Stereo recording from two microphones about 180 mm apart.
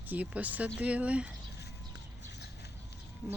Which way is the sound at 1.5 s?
70° left (ahead or behind).